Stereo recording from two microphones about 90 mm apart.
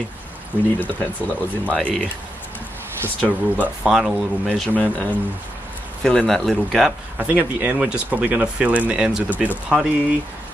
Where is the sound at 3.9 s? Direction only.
5° right (ahead or behind).